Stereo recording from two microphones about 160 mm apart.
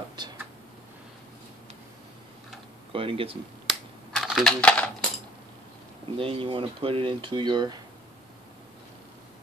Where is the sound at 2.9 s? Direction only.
35° right (ahead or behind).